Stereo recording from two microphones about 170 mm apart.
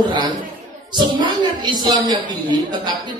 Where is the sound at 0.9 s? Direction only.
25° right (ahead or behind).